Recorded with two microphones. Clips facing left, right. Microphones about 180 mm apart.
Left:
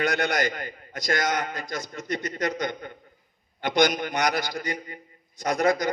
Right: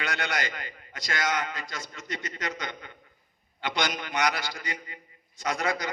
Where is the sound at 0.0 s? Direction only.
40° left (ahead or behind).